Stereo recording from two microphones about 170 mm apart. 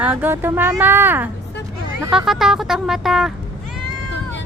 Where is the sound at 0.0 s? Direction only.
10° right (ahead or behind).